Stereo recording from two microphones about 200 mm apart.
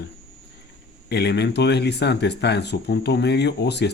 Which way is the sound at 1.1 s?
55° left (ahead or behind).